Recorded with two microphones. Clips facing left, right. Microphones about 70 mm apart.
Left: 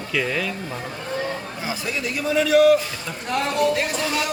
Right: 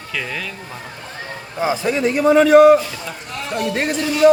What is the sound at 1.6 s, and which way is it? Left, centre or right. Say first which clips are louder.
A man's voice: right 9 dB; right.